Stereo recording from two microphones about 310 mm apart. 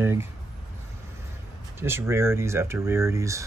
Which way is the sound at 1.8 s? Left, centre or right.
Centre.